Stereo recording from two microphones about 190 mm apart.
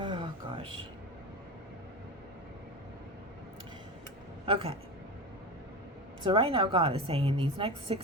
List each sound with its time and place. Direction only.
0.0 s a sound: 25° right (ahead or behind)
4.4 s speech: 30° right (ahead or behind)
6.2 s a woman's voice: 30° right (ahead or behind)